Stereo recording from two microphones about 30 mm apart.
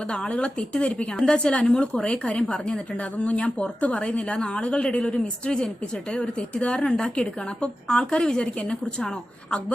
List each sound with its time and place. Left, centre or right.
0.1 s speech: left
3.0 s a woman's voice: left